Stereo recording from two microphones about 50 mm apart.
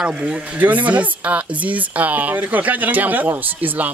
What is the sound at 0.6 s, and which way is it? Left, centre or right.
A man's voice, right.